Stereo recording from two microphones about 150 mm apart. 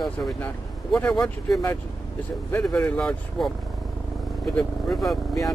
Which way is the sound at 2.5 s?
15° left (ahead or behind).